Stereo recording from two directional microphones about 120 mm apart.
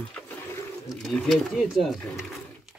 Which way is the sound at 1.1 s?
Centre (ahead or behind).